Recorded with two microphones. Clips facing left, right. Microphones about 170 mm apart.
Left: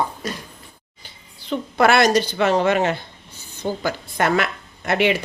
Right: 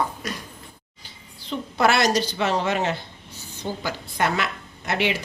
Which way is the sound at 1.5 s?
60° left (ahead or behind).